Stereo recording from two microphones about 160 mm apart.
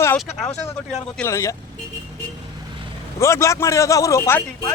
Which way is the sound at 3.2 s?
20° left (ahead or behind).